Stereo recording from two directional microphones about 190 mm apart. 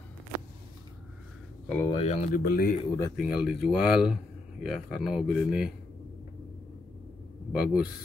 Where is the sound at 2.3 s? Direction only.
50° left (ahead or behind).